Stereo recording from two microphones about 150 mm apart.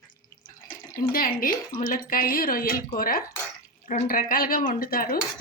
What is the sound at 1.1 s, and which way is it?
Speech, 70° left (ahead or behind).